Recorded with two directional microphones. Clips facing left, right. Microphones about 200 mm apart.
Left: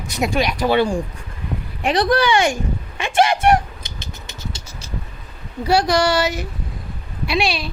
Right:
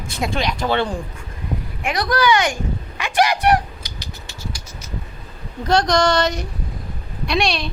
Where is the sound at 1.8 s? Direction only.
30° left (ahead or behind).